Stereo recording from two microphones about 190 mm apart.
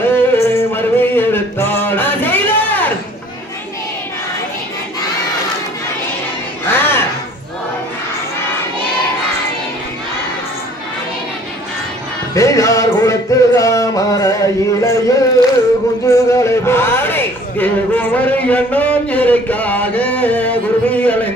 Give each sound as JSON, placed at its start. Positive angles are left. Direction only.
{"t": 0.0, "sound": "music", "side_deg": 15}
{"t": 6.7, "sound": "music", "side_deg": 10}
{"t": 12.4, "sound": "a sound", "side_deg": 15}